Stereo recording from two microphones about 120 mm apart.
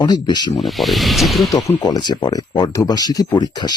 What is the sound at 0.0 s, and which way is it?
Speech, 35° left (ahead or behind).